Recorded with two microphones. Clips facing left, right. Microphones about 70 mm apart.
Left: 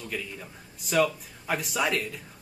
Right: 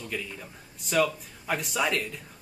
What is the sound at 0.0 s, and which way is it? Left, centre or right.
Speech, centre.